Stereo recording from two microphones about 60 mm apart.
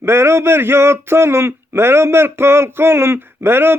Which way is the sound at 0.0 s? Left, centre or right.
Right.